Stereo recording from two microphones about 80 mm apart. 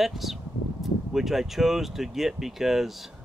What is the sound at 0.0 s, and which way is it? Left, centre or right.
Speech, centre.